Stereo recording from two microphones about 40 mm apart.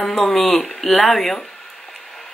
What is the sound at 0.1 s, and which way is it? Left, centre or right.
Speech, centre.